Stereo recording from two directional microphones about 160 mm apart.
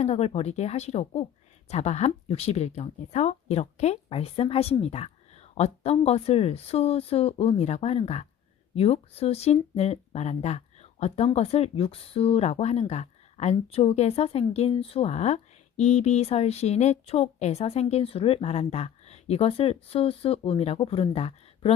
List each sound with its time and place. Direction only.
0.0 s speech: 40° left (ahead or behind)